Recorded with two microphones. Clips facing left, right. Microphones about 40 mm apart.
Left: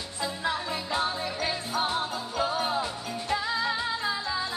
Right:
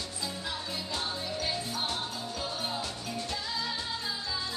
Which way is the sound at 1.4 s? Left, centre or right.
Left.